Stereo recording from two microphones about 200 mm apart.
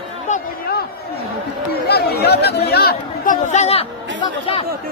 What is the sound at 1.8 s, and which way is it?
Chatter, 55° left (ahead or behind).